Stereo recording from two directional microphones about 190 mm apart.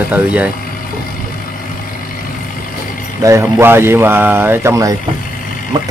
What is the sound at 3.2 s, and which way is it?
Speech, 15° right (ahead or behind).